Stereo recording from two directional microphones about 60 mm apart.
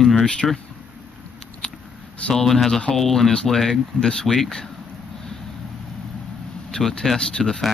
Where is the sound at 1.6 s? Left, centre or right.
Centre.